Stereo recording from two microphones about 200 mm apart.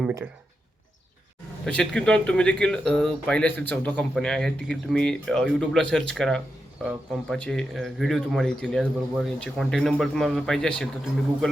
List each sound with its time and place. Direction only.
1.6 s speech: 5° left (ahead or behind)